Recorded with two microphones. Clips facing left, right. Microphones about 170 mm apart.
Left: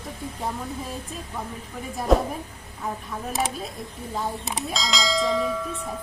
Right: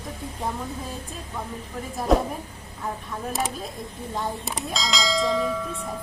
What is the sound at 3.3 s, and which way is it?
Bell, centre (ahead or behind).